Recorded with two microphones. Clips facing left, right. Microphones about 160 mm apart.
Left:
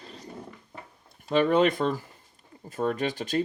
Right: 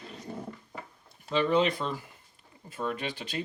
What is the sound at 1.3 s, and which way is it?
Speech, 50° left (ahead or behind).